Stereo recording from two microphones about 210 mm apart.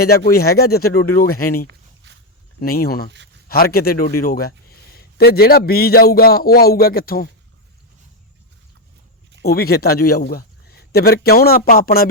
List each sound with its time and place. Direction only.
0.0 s a man's voice: 45° left (ahead or behind)
2.0 s a sound: 55° right (ahead or behind)
2.6 s a man's voice: 45° left (ahead or behind)
9.4 s a man's voice: 45° left (ahead or behind)